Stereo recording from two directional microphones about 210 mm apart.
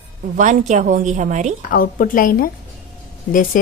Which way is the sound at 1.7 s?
40° left (ahead or behind).